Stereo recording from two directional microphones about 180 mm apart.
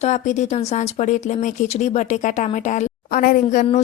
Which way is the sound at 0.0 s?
40° left (ahead or behind).